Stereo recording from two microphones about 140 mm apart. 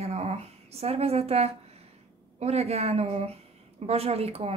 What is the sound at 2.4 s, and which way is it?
A woman's voice, 50° right (ahead or behind).